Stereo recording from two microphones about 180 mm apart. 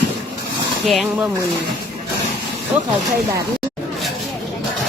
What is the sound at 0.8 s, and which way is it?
Speech, centre (ahead or behind).